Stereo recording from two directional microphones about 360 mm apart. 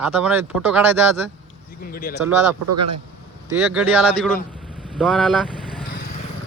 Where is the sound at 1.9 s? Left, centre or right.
Left.